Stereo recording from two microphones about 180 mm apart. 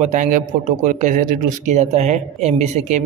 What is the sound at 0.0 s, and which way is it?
A man's voice, 40° right (ahead or behind).